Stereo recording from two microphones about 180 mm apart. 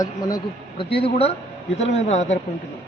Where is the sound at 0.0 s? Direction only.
20° left (ahead or behind).